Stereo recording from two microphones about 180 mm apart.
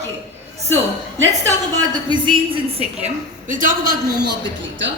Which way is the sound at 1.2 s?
20° right (ahead or behind).